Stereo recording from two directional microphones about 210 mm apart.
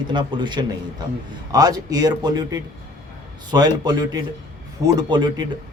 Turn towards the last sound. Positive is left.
turn(degrees=-20)  # may be behind; listen again after turning